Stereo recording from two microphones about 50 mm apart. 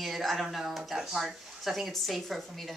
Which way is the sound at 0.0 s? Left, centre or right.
Centre.